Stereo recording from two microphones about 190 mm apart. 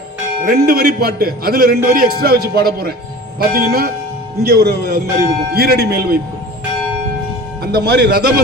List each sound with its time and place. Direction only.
0.4 s a man's voice: 55° right (ahead or behind)
7.6 s speech: 60° right (ahead or behind)